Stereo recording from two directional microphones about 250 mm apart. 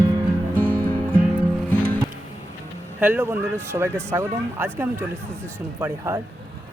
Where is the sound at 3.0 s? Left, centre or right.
Centre.